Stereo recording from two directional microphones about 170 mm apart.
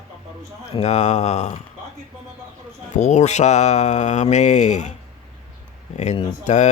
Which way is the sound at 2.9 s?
40° left (ahead or behind).